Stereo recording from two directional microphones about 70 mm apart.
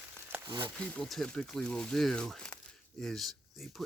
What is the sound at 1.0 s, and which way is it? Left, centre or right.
Speech, centre.